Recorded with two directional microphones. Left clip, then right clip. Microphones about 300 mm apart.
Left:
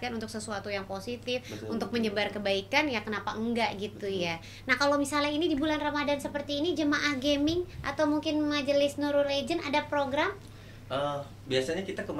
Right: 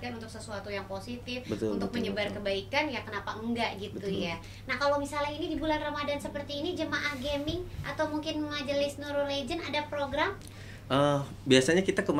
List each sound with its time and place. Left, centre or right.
0.0 s a woman's voice: left
10.9 s speech: right